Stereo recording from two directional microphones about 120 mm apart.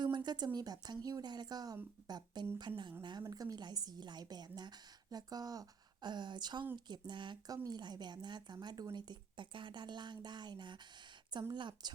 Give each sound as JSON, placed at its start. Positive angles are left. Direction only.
{"t": 0.0, "sound": "speech", "side_deg": -40}